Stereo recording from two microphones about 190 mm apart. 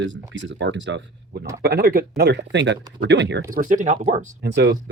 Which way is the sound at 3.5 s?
45° right (ahead or behind).